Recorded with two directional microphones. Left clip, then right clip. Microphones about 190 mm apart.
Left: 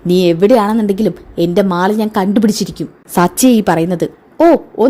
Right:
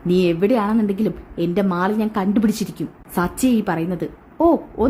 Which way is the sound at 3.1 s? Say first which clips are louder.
Left 9 dB; 25° left (ahead or behind).